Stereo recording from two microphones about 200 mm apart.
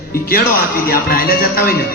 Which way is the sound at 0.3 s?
45° left (ahead or behind).